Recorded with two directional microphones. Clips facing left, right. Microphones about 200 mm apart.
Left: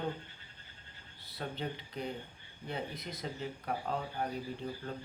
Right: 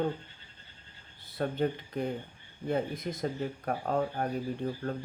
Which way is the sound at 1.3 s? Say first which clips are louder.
Right 9 dB; 50° right (ahead or behind).